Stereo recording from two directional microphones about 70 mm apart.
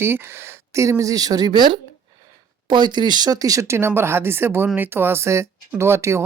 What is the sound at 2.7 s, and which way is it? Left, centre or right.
Speech, right.